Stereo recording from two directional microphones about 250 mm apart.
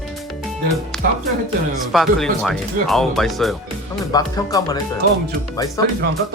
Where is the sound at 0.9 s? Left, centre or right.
Centre.